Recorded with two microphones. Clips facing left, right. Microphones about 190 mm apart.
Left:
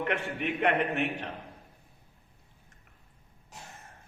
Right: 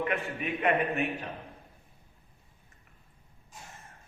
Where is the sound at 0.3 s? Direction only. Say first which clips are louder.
Left 1 dB; 70° left (ahead or behind).